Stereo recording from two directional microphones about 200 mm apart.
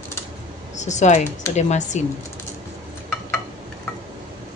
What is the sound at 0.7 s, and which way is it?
Speech, 35° left (ahead or behind).